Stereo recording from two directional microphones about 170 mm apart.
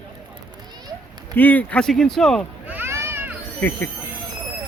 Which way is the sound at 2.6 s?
10° right (ahead or behind).